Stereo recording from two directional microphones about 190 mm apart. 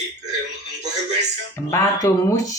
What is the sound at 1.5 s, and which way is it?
Speech, 15° left (ahead or behind).